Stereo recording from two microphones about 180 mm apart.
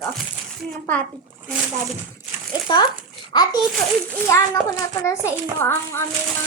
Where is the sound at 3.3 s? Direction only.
25° left (ahead or behind).